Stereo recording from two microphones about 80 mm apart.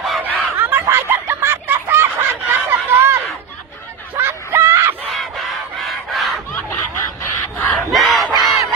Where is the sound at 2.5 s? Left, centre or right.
Right.